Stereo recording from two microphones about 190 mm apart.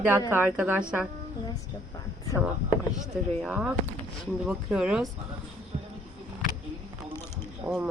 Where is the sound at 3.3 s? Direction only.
5° right (ahead or behind).